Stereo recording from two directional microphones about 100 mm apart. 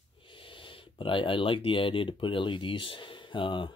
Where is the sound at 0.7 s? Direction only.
60° left (ahead or behind).